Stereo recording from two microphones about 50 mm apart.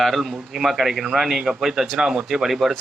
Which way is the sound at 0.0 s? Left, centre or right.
Centre.